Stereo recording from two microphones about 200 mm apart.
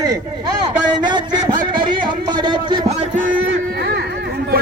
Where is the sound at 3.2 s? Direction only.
40° right (ahead or behind).